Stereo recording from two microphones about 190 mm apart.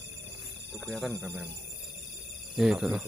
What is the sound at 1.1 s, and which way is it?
Speech, 15° right (ahead or behind).